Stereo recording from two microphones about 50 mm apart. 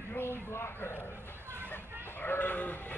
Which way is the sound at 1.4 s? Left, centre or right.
Right.